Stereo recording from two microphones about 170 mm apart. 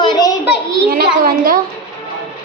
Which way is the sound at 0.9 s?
60° right (ahead or behind).